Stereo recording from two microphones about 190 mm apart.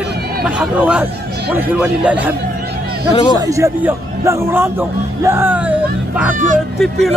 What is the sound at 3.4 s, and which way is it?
Speech, 15° right (ahead or behind).